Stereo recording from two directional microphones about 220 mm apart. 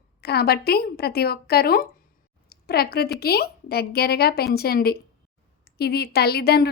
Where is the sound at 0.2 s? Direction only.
45° left (ahead or behind).